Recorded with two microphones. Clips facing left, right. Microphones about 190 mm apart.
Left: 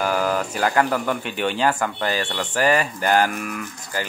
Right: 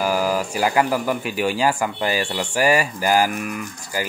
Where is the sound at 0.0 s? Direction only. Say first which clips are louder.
Right 1 dB; 5° right (ahead or behind).